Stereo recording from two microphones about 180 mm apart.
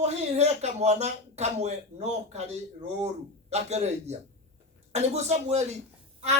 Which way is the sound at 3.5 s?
40° right (ahead or behind).